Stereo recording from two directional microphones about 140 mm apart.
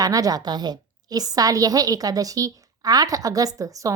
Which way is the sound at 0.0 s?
25° right (ahead or behind).